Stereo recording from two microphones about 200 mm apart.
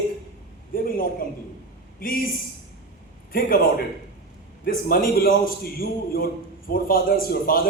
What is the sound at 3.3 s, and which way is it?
A man's voice, 45° left (ahead or behind).